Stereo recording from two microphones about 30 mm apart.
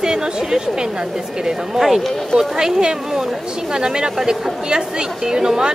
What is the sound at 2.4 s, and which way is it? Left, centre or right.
Speech, right.